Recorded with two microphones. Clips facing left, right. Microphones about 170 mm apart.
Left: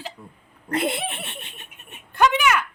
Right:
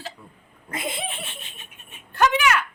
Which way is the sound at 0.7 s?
70° left (ahead or behind).